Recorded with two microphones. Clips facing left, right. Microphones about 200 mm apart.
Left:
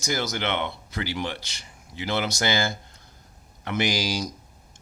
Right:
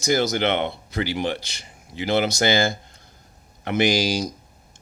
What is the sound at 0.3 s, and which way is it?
Speech, 25° right (ahead or behind).